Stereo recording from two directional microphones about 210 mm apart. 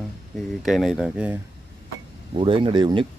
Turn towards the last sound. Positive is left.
turn(degrees=-25)  # may be behind; listen again after turning